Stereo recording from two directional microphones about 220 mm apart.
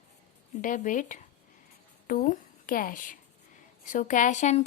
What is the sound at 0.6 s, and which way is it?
A woman's voice, 35° left (ahead or behind).